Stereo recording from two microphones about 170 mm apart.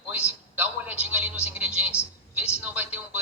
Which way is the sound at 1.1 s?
10° right (ahead or behind).